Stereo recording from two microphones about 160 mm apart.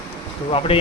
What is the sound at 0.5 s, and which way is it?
Speech, 35° left (ahead or behind).